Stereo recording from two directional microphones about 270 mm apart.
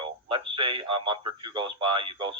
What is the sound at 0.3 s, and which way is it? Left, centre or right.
Speech, centre.